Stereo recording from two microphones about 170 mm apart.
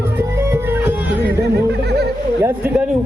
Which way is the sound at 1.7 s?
75° right (ahead or behind).